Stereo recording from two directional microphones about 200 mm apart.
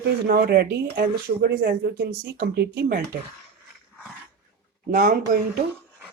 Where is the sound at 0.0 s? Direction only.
50° right (ahead or behind).